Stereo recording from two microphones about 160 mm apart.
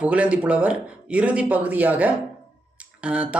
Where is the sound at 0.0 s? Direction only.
10° right (ahead or behind).